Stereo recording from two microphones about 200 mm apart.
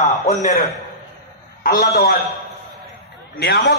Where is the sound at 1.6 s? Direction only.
50° left (ahead or behind).